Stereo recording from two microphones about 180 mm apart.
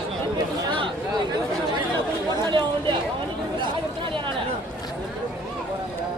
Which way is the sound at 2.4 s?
25° right (ahead or behind).